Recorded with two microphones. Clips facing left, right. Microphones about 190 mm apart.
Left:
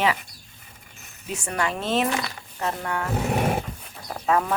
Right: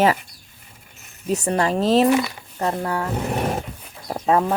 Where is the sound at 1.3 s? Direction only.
35° right (ahead or behind).